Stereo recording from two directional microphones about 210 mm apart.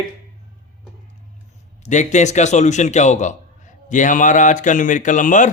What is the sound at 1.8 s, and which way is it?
A man's voice, 35° left (ahead or behind).